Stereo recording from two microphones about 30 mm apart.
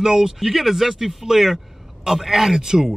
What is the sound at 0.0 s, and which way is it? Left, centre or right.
Speech, centre.